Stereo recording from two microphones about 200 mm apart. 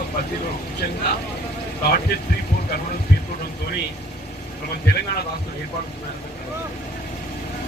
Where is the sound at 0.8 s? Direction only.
50° left (ahead or behind).